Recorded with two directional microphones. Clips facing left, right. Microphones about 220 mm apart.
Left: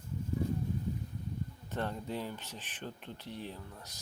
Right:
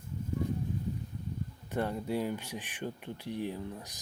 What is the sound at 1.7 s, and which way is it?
Speech, 10° right (ahead or behind).